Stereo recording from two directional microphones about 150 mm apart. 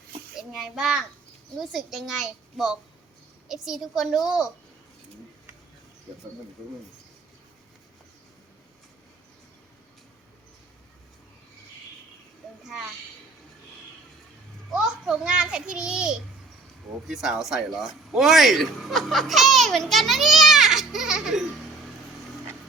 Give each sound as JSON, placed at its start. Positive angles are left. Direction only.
{"t": 0.3, "sound": "speech", "side_deg": 0}
{"t": 14.7, "sound": "a child's voice", "side_deg": -5}